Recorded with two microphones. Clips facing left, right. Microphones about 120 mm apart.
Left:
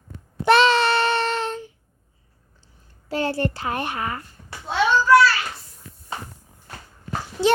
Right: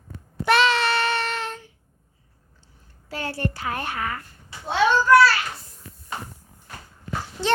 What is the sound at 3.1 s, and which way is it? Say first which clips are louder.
A child's voice: left 5 dB; 25° left (ahead or behind).